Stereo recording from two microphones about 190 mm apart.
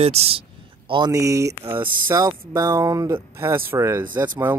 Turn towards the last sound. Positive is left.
turn(degrees=-10)  # may be behind; listen again after turning